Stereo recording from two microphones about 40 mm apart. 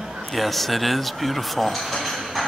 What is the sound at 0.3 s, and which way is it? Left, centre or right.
Speech, centre.